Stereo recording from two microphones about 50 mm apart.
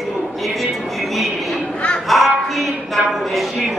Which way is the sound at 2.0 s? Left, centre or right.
Centre.